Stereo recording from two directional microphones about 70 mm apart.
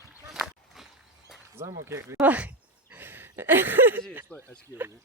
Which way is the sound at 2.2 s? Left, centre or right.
Right.